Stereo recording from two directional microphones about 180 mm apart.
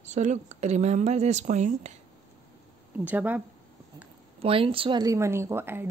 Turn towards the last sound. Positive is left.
turn(degrees=-10)  # may be behind; listen again after turning